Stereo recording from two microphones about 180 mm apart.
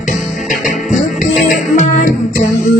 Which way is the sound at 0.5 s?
Centre (ahead or behind).